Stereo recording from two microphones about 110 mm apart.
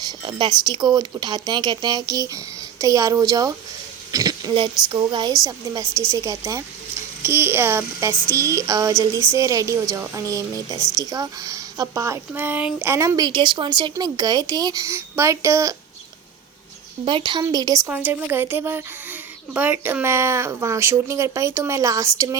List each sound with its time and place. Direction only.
0.3 s speech: 45° right (ahead or behind)
4.5 s speech: 45° right (ahead or behind)
6.1 s a child's voice: 30° right (ahead or behind)
13.1 s speech: 40° right (ahead or behind)
13.9 s speech: 35° right (ahead or behind)
17.1 s speech: 50° right (ahead or behind)
17.4 s speech: 35° right (ahead or behind)
17.8 s a child's voice: 15° right (ahead or behind)